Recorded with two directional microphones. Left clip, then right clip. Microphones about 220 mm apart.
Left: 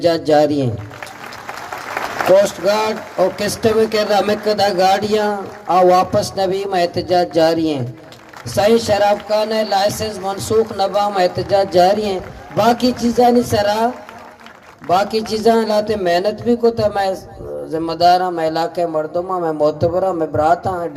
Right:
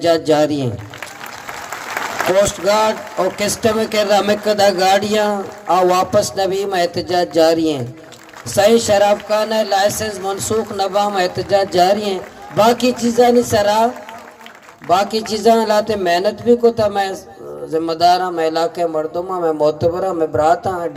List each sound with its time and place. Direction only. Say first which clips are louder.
0.0 s speech: even; 25° right (ahead or behind)
2.3 s speech: left 2 dB; 25° right (ahead or behind)